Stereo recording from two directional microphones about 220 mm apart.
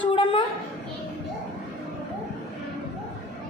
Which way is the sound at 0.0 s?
25° left (ahead or behind).